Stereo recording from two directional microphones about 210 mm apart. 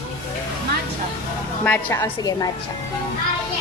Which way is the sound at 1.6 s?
10° left (ahead or behind).